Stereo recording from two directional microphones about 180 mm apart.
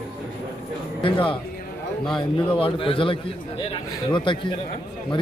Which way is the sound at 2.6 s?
30° left (ahead or behind).